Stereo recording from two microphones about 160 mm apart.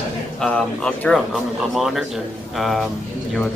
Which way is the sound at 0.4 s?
5° left (ahead or behind).